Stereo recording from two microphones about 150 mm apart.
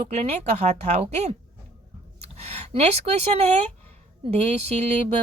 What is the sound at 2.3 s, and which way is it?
Speech, 45° right (ahead or behind).